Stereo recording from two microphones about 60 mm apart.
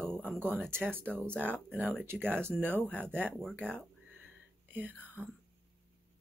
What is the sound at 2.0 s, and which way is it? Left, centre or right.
Speech, right.